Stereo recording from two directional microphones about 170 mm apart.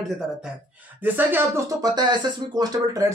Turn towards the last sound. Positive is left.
turn(degrees=-20)  # may be behind; listen again after turning